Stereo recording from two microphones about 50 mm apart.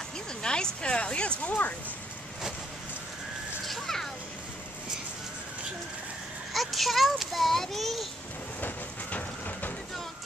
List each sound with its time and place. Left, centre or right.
0.4 s speech: centre
1.4 s speech: left
3.6 s children playing: centre
6.5 s a sound: centre
8.5 s train: left